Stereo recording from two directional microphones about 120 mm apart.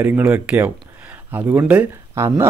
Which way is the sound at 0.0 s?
15° right (ahead or behind).